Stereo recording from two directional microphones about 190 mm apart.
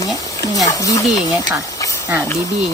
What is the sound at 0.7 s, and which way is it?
Speech, 15° left (ahead or behind).